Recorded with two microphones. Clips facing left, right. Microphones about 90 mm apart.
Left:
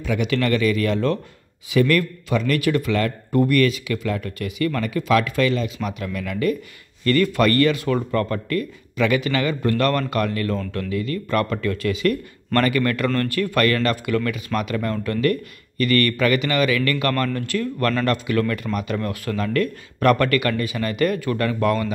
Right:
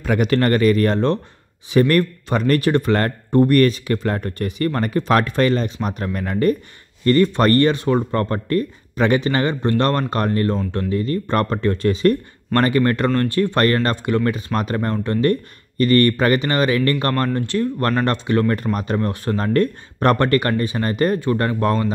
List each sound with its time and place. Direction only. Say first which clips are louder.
0.0 s speech: right 4 dB; 45° right (ahead or behind)